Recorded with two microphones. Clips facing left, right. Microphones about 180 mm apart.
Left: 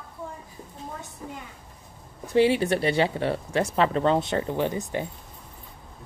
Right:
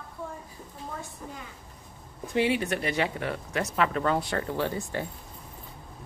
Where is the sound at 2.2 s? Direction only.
30° left (ahead or behind).